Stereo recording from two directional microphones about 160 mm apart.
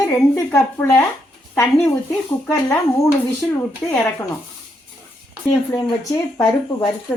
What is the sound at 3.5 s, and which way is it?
Speech, 10° left (ahead or behind).